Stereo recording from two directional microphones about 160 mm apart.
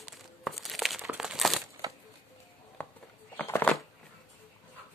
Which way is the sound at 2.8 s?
10° left (ahead or behind).